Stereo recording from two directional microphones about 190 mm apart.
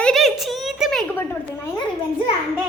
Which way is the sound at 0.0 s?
Centre (ahead or behind).